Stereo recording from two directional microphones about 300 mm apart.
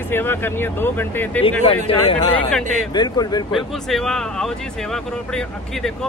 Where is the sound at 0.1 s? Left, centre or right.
Centre.